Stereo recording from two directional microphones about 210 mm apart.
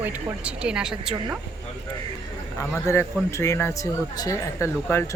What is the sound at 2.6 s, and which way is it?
A man's voice, 15° left (ahead or behind).